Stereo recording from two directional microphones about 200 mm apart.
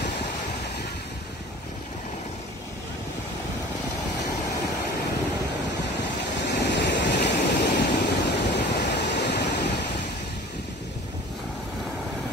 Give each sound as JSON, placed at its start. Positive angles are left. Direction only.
{"t": 6.4, "sound": "waves", "side_deg": 60}